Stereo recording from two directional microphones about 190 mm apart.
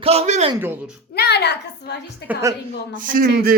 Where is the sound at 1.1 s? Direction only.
60° left (ahead or behind).